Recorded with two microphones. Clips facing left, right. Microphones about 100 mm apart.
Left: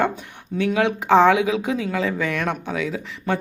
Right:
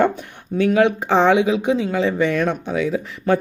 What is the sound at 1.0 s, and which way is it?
A woman's voice, 30° right (ahead or behind).